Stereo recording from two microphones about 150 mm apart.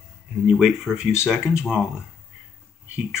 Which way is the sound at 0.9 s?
5° left (ahead or behind).